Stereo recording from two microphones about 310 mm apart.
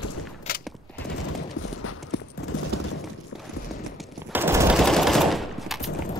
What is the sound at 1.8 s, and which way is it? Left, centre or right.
Clip-clop, left.